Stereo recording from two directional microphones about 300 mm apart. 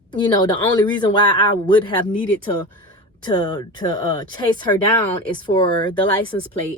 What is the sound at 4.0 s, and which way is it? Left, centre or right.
Speech, right.